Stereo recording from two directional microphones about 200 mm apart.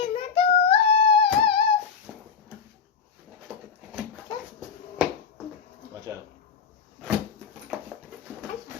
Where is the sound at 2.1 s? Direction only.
5° right (ahead or behind).